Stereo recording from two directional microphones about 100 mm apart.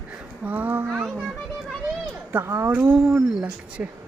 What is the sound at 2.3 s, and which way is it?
Speech, 25° right (ahead or behind).